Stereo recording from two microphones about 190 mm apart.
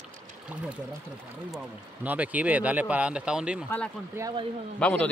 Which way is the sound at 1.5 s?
5° right (ahead or behind).